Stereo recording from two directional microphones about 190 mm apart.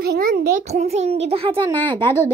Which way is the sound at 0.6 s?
35° right (ahead or behind).